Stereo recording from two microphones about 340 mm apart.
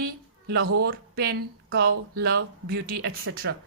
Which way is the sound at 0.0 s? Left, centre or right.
Right.